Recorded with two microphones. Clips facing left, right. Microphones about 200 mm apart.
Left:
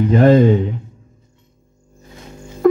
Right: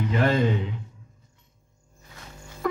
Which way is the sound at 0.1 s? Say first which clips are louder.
Left 12 dB; 40° left (ahead or behind).